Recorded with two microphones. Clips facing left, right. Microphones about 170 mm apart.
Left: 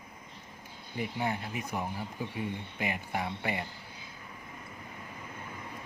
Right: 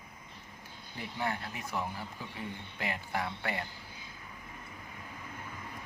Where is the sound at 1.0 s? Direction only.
20° left (ahead or behind).